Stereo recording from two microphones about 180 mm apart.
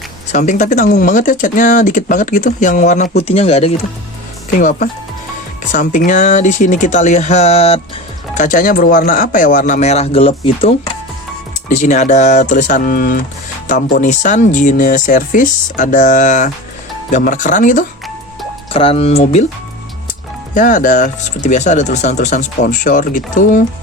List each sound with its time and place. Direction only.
0.3 s speech: 40° left (ahead or behind)
4.5 s speech: 45° left (ahead or behind)
8.4 s speech: 50° left (ahead or behind)
14.0 s speech: 40° left (ahead or behind)
18.7 s speech: 30° left (ahead or behind)
20.5 s speech: 50° left (ahead or behind)